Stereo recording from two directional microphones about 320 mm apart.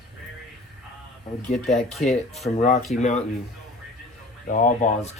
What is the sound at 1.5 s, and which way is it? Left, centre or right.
Speech, left.